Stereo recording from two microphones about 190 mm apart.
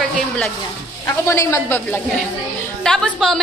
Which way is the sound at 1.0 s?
15° left (ahead or behind).